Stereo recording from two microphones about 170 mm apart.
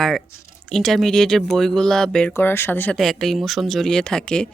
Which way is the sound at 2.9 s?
Centre (ahead or behind).